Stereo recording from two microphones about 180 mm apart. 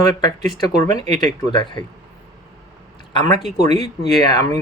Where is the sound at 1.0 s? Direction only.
25° left (ahead or behind).